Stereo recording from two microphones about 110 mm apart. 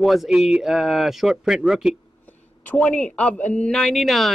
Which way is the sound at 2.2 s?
15° left (ahead or behind).